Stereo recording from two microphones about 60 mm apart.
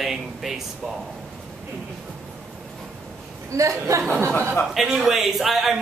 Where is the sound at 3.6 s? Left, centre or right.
Right.